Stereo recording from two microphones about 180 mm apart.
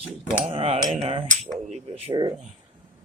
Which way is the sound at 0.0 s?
5° right (ahead or behind).